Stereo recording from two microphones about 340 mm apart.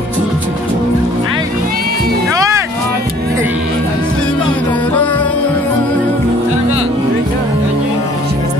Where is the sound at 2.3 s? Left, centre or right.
Centre.